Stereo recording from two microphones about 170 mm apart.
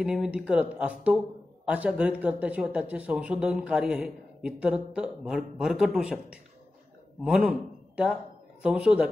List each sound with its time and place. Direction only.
0.0 s a man's voice: 5° right (ahead or behind)